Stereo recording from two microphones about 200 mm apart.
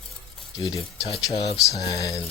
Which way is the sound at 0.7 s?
30° left (ahead or behind).